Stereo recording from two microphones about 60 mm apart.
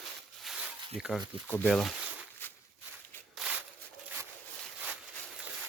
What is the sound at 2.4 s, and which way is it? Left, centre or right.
Walk, left.